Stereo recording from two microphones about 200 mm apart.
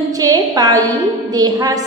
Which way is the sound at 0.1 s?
15° right (ahead or behind).